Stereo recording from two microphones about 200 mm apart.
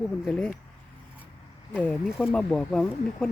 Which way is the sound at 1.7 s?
10° left (ahead or behind).